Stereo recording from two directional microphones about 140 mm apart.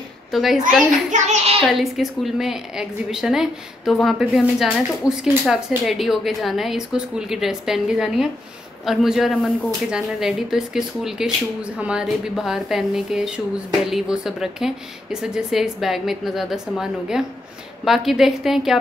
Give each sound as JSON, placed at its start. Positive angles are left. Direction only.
{"t": 0.3, "sound": "a woman's voice", "side_deg": 0}
{"t": 1.1, "sound": "a child's voice", "side_deg": -55}
{"t": 1.7, "sound": "a woman's voice", "side_deg": 0}